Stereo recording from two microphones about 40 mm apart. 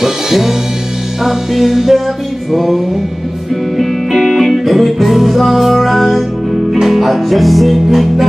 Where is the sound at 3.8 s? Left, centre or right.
Centre.